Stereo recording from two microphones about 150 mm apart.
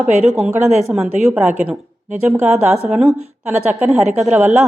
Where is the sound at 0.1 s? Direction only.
50° right (ahead or behind).